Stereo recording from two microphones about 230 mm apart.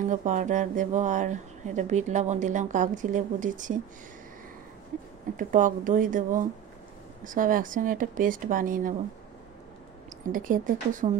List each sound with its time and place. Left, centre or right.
0.0 s speech: right
5.4 s speech: right
10.3 s speech: right